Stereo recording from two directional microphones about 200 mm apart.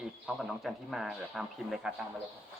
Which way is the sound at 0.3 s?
Centre (ahead or behind).